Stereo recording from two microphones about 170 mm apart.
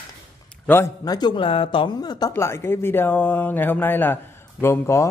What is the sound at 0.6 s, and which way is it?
A man's voice, 15° left (ahead or behind).